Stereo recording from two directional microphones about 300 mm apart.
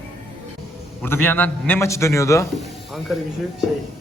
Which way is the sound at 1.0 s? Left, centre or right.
Centre.